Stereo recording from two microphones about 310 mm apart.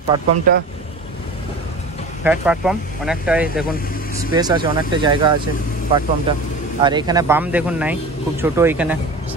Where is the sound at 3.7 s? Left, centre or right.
Left.